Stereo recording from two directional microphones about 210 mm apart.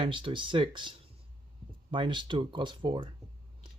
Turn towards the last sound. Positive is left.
turn(degrees=-20)  # may be behind; listen again after turning